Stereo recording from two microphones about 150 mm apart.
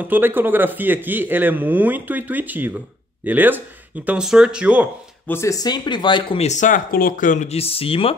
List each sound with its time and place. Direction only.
0.1 s speech: 15° right (ahead or behind)
5.3 s speech: 20° left (ahead or behind)
6.4 s speech: 55° left (ahead or behind)
7.4 s speech: 40° left (ahead or behind)